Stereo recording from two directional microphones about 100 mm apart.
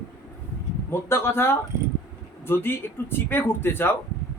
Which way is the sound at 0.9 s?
25° left (ahead or behind).